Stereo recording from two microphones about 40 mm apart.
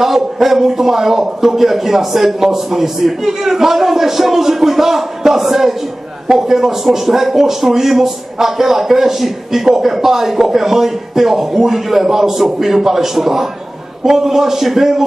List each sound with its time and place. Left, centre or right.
0.0 s a man's voice: centre